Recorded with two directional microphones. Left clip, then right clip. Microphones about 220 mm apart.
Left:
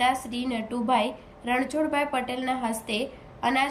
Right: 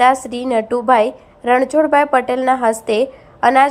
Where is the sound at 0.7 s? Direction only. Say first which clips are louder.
Right 11 dB; 60° right (ahead or behind).